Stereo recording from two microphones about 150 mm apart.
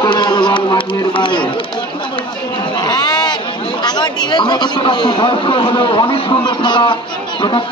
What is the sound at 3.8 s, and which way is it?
A man's voice, 30° left (ahead or behind).